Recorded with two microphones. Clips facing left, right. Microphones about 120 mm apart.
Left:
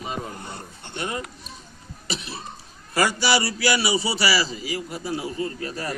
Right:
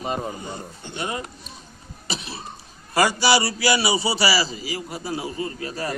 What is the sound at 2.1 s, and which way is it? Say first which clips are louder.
A man's voice: even; 30° right (ahead or behind).